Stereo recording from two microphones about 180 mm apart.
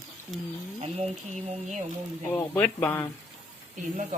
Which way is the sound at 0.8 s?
35° right (ahead or behind).